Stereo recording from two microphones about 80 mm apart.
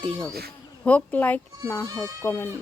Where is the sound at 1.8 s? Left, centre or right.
Right.